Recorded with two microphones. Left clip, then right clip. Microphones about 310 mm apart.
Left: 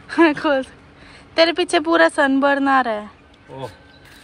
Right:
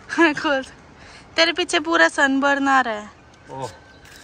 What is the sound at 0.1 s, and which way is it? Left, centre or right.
Speech, centre.